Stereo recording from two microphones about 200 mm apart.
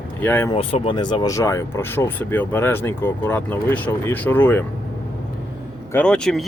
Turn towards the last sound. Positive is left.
turn(degrees=0)  # may be behind; listen again after turning